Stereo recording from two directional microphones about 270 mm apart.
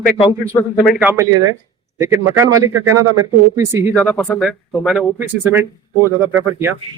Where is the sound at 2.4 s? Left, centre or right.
Centre.